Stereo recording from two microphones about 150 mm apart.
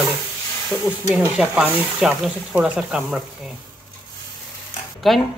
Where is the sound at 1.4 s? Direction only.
5° right (ahead or behind).